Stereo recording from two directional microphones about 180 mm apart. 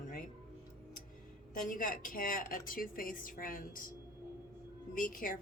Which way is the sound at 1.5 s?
50° left (ahead or behind).